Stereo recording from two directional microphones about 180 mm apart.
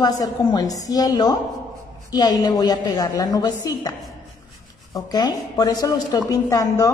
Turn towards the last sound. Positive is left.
turn(degrees=20)  # may be behind; listen again after turning